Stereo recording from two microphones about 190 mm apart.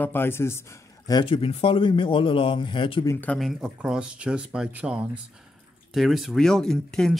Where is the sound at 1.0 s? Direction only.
25° left (ahead or behind).